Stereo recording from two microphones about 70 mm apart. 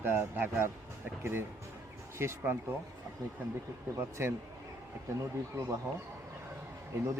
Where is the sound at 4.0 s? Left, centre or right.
Right.